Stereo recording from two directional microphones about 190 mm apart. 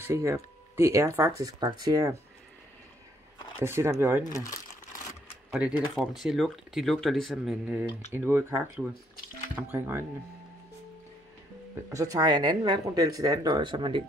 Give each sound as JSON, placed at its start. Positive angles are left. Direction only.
{"t": 0.0, "sound": "speech", "side_deg": -15}
{"t": 3.5, "sound": "speech", "side_deg": -15}
{"t": 4.2, "sound": "speech", "side_deg": 20}
{"t": 5.5, "sound": "speech", "side_deg": -5}
{"t": 11.9, "sound": "speech", "side_deg": -15}